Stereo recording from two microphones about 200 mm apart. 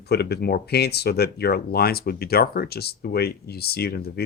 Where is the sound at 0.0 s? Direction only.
55° left (ahead or behind).